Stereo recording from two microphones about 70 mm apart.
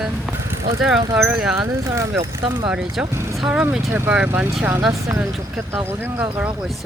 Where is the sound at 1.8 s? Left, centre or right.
Right.